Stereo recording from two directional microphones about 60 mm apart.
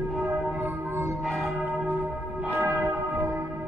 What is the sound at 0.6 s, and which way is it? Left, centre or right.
Music, right.